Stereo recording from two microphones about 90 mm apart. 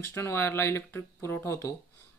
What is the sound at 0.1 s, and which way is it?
A man's voice, 25° left (ahead or behind).